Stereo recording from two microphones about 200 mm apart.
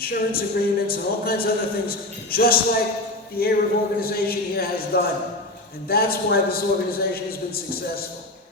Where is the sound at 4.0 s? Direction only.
50° left (ahead or behind).